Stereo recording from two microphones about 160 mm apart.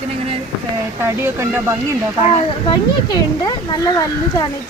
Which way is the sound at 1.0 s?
15° right (ahead or behind).